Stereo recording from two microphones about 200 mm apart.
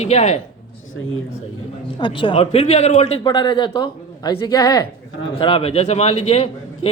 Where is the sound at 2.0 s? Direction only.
25° left (ahead or behind).